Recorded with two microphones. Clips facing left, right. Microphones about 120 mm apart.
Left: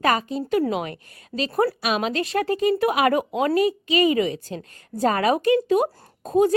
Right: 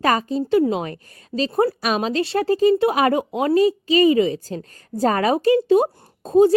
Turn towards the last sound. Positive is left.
turn(degrees=-30)  # may be behind; listen again after turning